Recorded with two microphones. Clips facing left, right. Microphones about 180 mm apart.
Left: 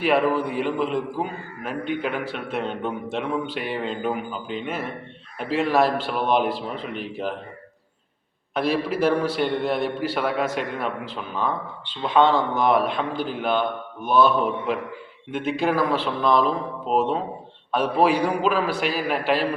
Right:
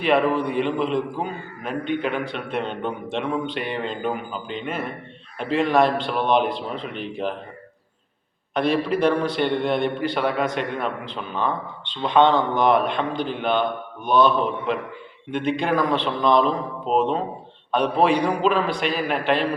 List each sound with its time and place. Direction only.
0.0 s a man's voice: 5° left (ahead or behind)
8.5 s a man's voice: 5° left (ahead or behind)